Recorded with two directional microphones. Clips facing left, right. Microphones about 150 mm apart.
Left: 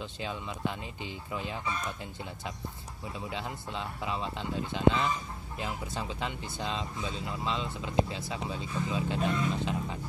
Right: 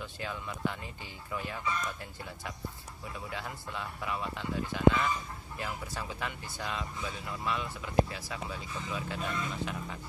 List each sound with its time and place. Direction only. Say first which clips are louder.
0.0 s speech: left 2 dB; 20° left (ahead or behind)
3.3 s speech: left 3 dB; 20° left (ahead or behind)